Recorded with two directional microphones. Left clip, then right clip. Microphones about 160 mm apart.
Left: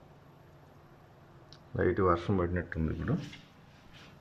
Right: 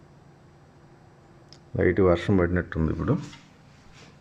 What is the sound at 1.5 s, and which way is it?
Speech, 15° right (ahead or behind).